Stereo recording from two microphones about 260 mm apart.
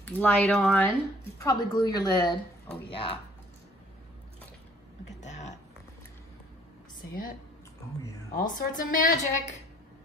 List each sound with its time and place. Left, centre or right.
0.0 s speech: centre
1.4 s a woman's voice: centre
5.1 s a sound: left
8.4 s a woman's voice: left